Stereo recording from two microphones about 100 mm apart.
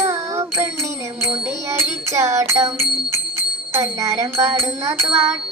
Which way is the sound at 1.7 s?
30° right (ahead or behind).